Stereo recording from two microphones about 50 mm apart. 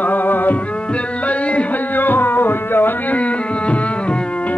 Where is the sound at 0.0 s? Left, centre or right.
Left.